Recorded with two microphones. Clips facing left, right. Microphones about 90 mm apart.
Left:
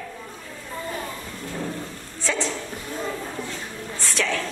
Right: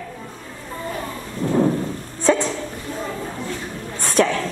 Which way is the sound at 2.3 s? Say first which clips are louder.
Right 10 dB; 40° right (ahead or behind).